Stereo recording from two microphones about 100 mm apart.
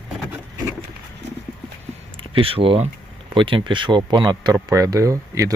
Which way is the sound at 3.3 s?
55° right (ahead or behind).